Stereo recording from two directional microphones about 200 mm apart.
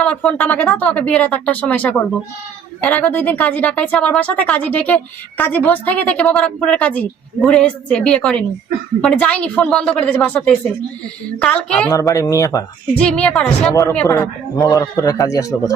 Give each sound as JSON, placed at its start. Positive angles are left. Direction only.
{"t": 0.0, "sound": "a woman's voice", "side_deg": 5}
{"t": 12.9, "sound": "a woman's voice", "side_deg": 5}